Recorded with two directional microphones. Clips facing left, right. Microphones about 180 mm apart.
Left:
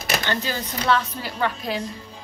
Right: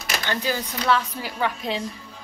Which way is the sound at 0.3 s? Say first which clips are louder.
Even; 10° right (ahead or behind).